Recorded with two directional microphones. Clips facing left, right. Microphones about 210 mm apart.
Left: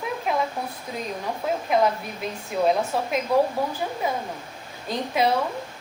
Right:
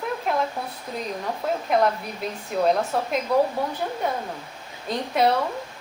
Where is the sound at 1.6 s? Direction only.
Centre (ahead or behind).